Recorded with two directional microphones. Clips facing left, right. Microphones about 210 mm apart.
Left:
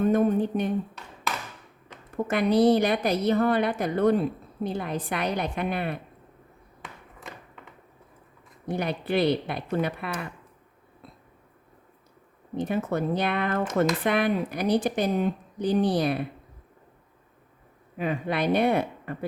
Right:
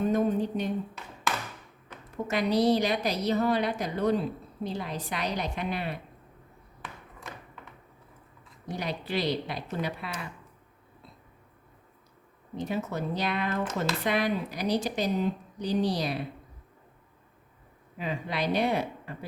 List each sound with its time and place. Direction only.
0.0 s speech: 55° left (ahead or behind)
2.2 s a woman's voice: 55° left (ahead or behind)
8.6 s speech: 55° left (ahead or behind)
12.5 s speech: 55° left (ahead or behind)
17.9 s speech: 55° left (ahead or behind)